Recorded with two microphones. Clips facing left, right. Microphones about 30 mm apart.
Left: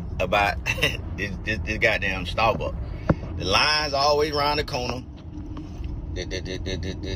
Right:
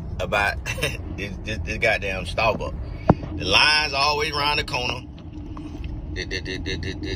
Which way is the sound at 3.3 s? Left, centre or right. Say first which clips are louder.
Right 2 dB; right.